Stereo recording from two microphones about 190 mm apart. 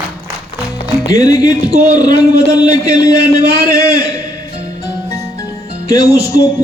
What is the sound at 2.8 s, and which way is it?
Speech, 20° left (ahead or behind).